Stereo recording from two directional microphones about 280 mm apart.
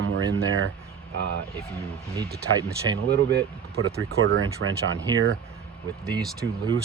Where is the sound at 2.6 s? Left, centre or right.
Centre.